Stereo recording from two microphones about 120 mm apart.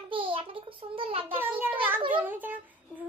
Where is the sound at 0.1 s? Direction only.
45° right (ahead or behind).